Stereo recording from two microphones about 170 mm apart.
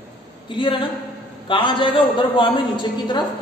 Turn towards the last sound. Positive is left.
turn(degrees=30)  # may be behind; listen again after turning